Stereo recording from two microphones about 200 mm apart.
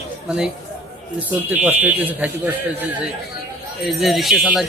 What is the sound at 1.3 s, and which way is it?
Speech, 10° right (ahead or behind).